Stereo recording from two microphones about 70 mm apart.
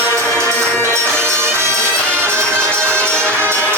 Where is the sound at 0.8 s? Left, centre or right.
Right.